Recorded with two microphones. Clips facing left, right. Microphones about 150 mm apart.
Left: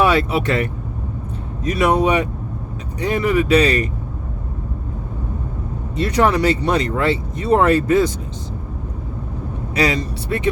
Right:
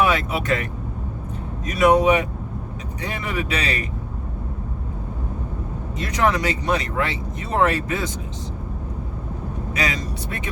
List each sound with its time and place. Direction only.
0.0 s speech: 30° left (ahead or behind)
6.0 s speech: 35° left (ahead or behind)
9.7 s speech: 35° left (ahead or behind)